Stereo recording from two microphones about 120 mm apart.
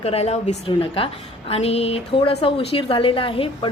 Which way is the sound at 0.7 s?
50° left (ahead or behind).